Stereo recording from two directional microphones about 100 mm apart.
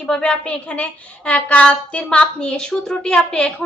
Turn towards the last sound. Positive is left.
turn(degrees=10)  # may be behind; listen again after turning